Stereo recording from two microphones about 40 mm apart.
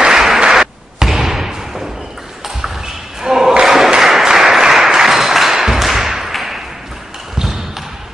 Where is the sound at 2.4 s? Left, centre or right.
Centre.